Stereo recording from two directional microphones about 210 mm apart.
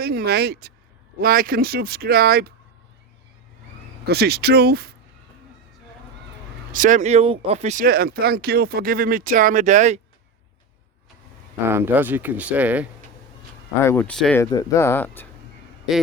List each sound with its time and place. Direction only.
0.0 s speech: 50° right (ahead or behind)
4.0 s speech: 50° right (ahead or behind)
6.7 s speech: 40° right (ahead or behind)
11.6 s speech: 10° right (ahead or behind)
13.8 s speech: 10° left (ahead or behind)
14.5 s speech: 15° left (ahead or behind)